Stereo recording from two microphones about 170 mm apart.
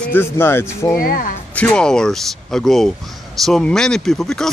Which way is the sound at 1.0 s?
60° left (ahead or behind).